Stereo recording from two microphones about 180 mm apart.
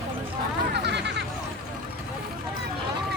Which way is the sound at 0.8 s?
70° right (ahead or behind).